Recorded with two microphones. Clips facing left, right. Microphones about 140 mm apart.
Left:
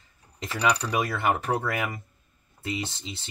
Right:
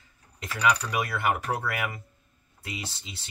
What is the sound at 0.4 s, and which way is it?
Speech, 30° left (ahead or behind).